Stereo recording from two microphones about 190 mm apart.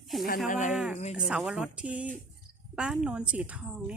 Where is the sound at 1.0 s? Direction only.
35° left (ahead or behind).